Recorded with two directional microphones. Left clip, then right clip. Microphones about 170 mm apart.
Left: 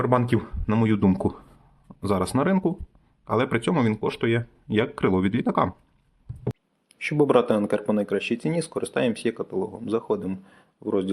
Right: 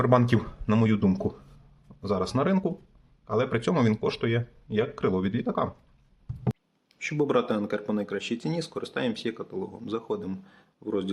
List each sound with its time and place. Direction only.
0.0 s speech: 10° left (ahead or behind)
0.9 s speech: 30° left (ahead or behind)
3.2 s speech: 30° left (ahead or behind)
3.6 s speech: 15° left (ahead or behind); by 5.7 s 35° left (ahead or behind)
7.0 s speech: 20° left (ahead or behind)